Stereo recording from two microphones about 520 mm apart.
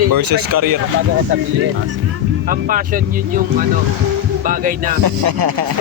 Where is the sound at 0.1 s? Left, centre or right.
Right.